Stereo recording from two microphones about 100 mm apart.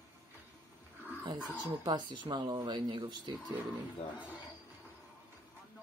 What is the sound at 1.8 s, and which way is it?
Speech, 45° right (ahead or behind).